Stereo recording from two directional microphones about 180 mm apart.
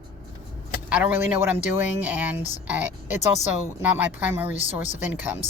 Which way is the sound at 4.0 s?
10° right (ahead or behind).